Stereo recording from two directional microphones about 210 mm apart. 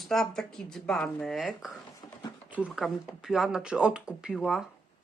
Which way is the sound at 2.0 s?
25° left (ahead or behind).